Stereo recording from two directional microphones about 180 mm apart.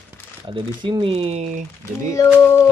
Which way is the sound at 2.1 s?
15° left (ahead or behind).